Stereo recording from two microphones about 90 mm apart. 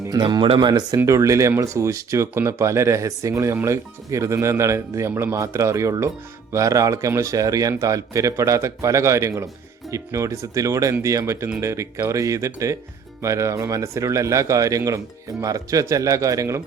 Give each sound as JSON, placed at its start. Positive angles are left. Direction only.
{"t": 0.2, "sound": "speech", "side_deg": -60}
{"t": 0.9, "sound": "speech", "side_deg": -35}